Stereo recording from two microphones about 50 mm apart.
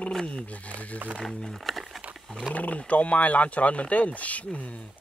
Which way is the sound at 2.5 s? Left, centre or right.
Left.